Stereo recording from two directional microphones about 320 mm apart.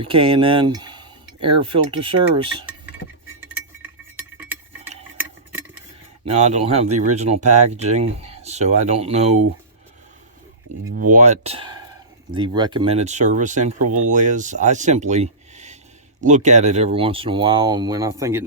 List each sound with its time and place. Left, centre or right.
0.0 s speech: centre
5.1 s a sound: centre
6.3 s speech: right
10.9 s speech: right; by 18.4 s centre